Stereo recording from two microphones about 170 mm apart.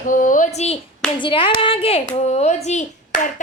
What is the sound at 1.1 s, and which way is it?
Clapping, 30° left (ahead or behind).